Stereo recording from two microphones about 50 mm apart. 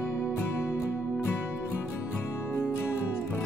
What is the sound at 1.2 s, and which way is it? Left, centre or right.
Music, left.